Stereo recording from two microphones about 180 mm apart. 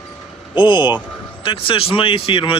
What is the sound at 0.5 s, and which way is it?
Speech, 25° left (ahead or behind).